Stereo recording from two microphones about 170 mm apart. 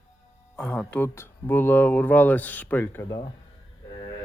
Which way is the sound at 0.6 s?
5° left (ahead or behind).